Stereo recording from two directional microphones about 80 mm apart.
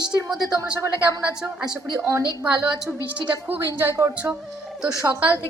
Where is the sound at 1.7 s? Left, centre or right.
Right.